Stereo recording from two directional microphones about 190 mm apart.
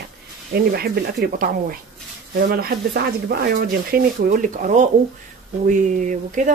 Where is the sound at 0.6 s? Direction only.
55° right (ahead or behind).